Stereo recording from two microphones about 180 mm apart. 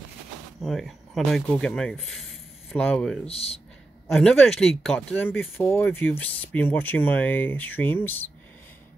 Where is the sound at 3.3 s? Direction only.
35° left (ahead or behind).